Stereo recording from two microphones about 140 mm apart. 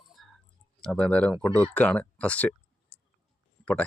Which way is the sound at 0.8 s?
5° left (ahead or behind).